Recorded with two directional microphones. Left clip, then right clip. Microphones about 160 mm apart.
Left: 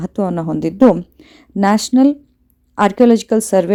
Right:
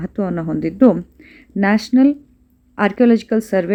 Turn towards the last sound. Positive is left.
turn(degrees=30)  # may be behind; listen again after turning